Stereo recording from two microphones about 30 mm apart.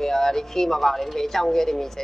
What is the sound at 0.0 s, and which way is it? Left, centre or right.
Speech, centre.